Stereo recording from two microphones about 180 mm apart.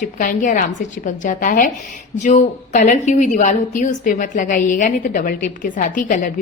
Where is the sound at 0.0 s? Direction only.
45° left (ahead or behind).